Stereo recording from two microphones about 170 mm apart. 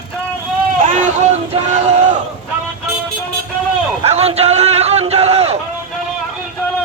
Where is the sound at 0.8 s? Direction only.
50° right (ahead or behind).